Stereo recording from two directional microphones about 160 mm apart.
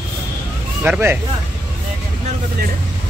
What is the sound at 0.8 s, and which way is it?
Speech, 10° right (ahead or behind).